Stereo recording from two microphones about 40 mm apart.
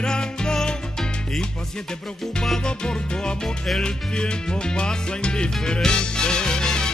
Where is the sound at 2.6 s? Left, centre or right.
Left.